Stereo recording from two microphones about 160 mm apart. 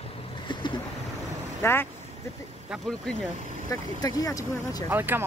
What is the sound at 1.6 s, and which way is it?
Speech, 15° left (ahead or behind).